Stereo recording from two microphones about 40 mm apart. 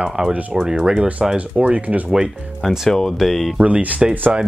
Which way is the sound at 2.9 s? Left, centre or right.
Centre.